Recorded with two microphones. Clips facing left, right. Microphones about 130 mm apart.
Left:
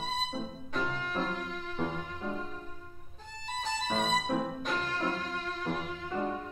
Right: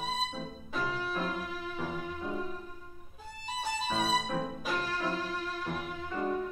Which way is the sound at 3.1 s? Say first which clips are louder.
Even; 10° right (ahead or behind).